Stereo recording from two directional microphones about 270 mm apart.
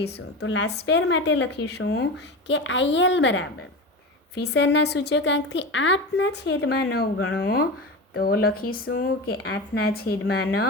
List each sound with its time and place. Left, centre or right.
0.0 s a woman's voice: left